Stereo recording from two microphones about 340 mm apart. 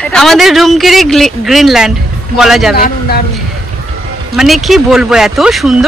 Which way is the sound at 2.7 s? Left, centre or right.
Left.